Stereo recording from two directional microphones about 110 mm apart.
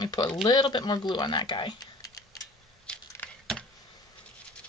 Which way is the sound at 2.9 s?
10° left (ahead or behind).